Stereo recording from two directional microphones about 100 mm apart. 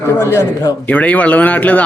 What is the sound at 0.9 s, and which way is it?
Speech, 15° left (ahead or behind).